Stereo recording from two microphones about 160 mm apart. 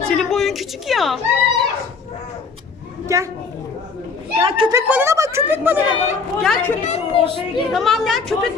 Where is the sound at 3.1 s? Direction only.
20° right (ahead or behind).